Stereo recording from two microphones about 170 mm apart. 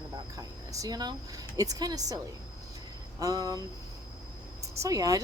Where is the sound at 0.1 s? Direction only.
20° right (ahead or behind).